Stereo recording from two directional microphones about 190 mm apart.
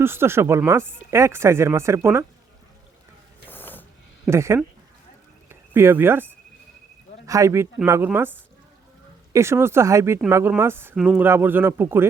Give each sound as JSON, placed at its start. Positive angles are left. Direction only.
{"t": 0.0, "sound": "speech", "side_deg": -10}
{"t": 3.5, "sound": "a sound", "side_deg": 10}
{"t": 4.3, "sound": "speech", "side_deg": -15}
{"t": 5.5, "sound": "a sound", "side_deg": -10}
{"t": 7.3, "sound": "speech", "side_deg": -15}
{"t": 9.3, "sound": "speech", "side_deg": -15}